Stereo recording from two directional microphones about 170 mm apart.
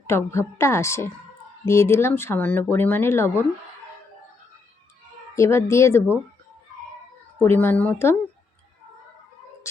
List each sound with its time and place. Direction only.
0.1 s speech: 15° left (ahead or behind)
5.3 s speech: 15° left (ahead or behind)
7.3 s speech: 15° left (ahead or behind)